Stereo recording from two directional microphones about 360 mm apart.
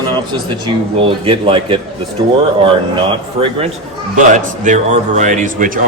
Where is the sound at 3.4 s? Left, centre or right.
Centre.